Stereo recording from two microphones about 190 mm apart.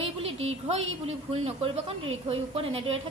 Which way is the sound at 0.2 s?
30° right (ahead or behind).